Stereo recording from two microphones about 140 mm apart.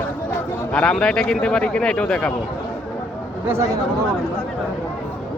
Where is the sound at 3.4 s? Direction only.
20° right (ahead or behind).